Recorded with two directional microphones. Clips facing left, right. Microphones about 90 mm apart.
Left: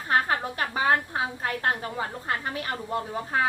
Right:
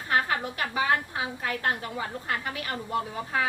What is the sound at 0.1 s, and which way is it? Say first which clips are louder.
A woman's voice: left 2 dB; 35° left (ahead or behind).